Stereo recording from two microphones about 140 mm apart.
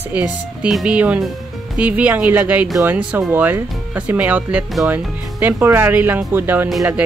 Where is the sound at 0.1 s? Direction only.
5° right (ahead or behind).